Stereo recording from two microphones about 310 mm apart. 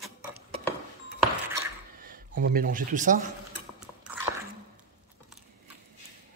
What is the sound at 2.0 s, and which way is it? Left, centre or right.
Speech, right.